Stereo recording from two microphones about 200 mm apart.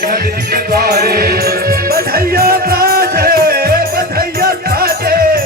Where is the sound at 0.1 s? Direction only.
50° right (ahead or behind).